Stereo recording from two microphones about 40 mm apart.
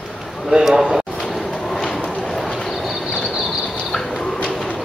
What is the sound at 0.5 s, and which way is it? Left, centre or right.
Speech, centre.